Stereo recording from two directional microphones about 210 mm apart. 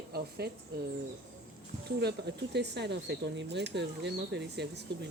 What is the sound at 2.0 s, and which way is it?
Speech, 55° right (ahead or behind).